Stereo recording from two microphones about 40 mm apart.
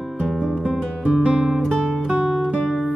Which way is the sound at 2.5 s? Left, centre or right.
Centre.